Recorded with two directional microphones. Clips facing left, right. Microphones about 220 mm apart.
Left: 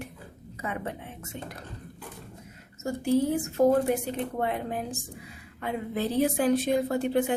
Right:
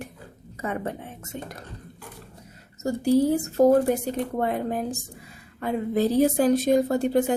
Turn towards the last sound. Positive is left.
turn(degrees=-40)  # may be behind; listen again after turning